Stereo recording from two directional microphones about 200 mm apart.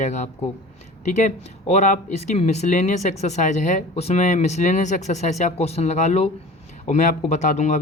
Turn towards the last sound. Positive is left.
turn(degrees=35)  # may be behind; listen again after turning